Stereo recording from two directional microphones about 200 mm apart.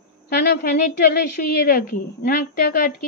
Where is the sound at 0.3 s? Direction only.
55° left (ahead or behind).